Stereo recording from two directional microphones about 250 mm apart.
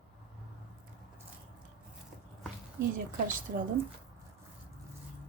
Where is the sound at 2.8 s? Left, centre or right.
Right.